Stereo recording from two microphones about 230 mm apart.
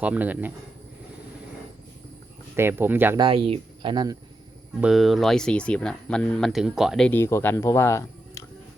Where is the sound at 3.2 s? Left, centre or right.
Right.